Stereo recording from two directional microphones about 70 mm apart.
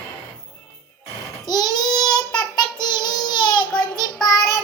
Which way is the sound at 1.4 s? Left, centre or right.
Left.